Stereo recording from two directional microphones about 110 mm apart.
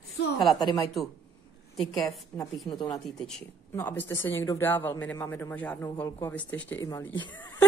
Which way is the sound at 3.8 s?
20° left (ahead or behind).